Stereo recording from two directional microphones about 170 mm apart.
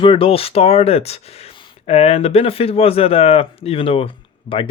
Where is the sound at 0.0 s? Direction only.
30° left (ahead or behind).